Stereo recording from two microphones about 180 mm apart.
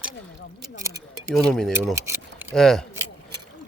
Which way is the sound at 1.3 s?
5° left (ahead or behind).